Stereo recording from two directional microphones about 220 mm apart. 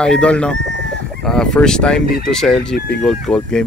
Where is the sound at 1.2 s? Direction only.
Centre (ahead or behind).